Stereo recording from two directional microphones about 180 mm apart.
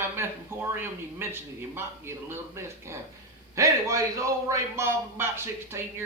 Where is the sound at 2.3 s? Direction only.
15° right (ahead or behind).